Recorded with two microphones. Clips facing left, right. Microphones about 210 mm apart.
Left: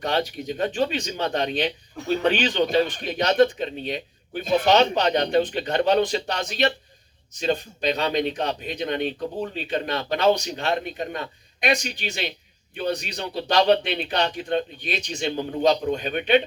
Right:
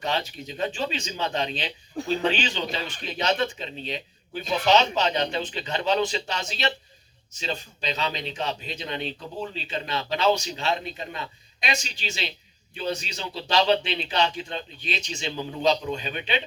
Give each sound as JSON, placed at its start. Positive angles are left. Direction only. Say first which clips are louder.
{"t": 0.4, "sound": "speech", "louder": "left 5 dB", "side_deg": 55}
{"t": 2.0, "sound": "speech", "louder": "right 2 dB", "side_deg": -30}
{"t": 2.4, "sound": "speech", "louder": "left 9 dB", "side_deg": 55}